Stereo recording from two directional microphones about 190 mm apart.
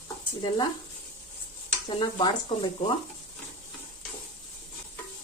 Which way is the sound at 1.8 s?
25° left (ahead or behind).